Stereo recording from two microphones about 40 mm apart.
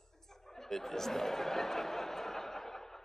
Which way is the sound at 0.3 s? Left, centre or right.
Centre.